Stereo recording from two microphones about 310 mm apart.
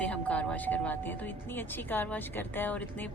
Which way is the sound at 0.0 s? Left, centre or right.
Centre.